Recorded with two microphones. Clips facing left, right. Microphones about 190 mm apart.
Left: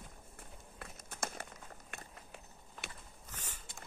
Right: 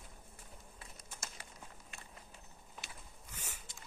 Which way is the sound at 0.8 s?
60° left (ahead or behind).